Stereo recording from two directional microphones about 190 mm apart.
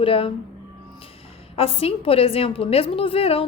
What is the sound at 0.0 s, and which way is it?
Speech, 30° left (ahead or behind).